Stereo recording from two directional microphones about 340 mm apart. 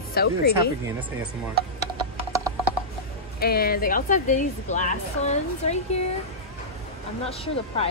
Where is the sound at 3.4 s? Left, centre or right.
Left.